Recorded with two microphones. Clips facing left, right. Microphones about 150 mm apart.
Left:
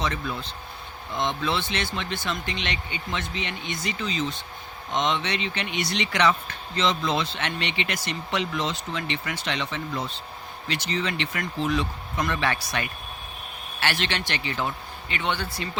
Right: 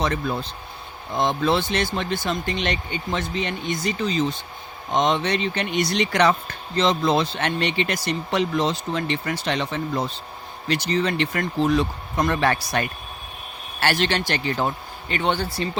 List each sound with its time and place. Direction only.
0.0 s speech: 45° right (ahead or behind)